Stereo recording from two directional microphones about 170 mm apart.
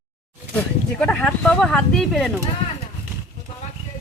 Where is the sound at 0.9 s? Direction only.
5° left (ahead or behind).